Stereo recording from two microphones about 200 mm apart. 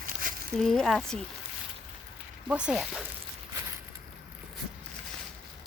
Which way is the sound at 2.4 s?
5° right (ahead or behind).